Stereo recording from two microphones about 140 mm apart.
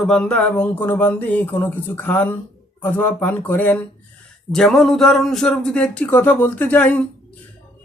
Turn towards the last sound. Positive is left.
turn(degrees=10)  # may be behind; listen again after turning